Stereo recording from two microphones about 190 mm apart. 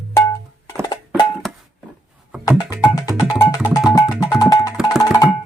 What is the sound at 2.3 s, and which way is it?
Music, 5° right (ahead or behind).